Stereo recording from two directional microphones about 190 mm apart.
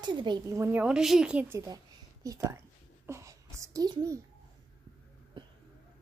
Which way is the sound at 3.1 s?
15° right (ahead or behind).